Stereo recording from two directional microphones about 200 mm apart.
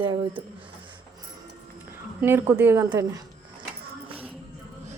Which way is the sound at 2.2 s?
10° right (ahead or behind).